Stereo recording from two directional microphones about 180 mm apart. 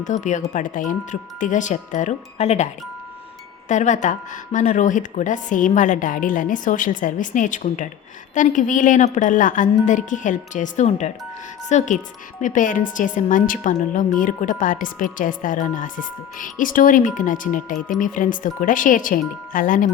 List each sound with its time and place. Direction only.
0.0 s a woman's voice: 40° left (ahead or behind)
3.7 s a woman's voice: 40° left (ahead or behind)